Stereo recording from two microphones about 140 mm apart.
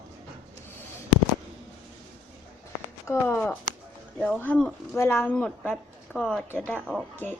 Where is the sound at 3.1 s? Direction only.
20° left (ahead or behind).